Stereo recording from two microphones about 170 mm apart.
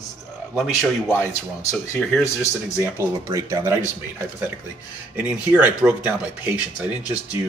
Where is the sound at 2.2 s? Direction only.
15° left (ahead or behind).